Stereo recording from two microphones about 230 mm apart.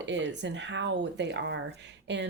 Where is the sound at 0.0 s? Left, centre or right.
Right.